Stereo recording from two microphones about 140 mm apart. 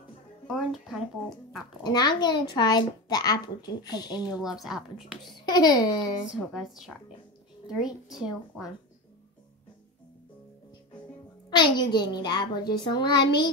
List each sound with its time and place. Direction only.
0.5 s a sound: centre (ahead or behind)
1.8 s a child's voice: 30° left (ahead or behind)
4.6 s a woman's voice: 5° right (ahead or behind)
5.2 s a child's voice: 30° left (ahead or behind)
6.3 s a woman's voice: 5° right (ahead or behind)
11.5 s a woman's voice: 30° left (ahead or behind)